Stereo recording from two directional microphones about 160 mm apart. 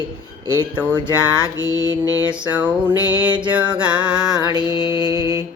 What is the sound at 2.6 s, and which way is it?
Music, 10° right (ahead or behind).